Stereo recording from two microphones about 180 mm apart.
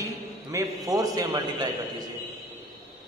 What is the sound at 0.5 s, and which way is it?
A man's voice, 20° right (ahead or behind).